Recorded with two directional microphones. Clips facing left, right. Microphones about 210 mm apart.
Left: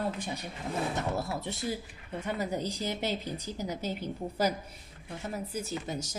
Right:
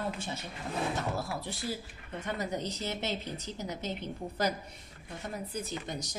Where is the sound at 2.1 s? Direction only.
10° left (ahead or behind).